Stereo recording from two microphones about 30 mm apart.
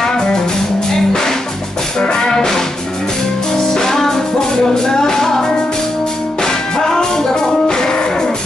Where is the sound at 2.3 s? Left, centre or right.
Centre.